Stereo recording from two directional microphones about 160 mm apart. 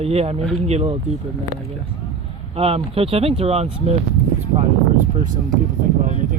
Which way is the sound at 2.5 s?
40° right (ahead or behind).